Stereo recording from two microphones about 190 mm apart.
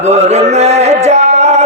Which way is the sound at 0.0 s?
35° right (ahead or behind).